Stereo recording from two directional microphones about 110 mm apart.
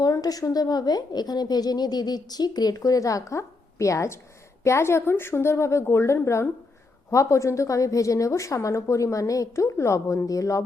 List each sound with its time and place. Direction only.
0.0 s a woman's voice: 35° left (ahead or behind)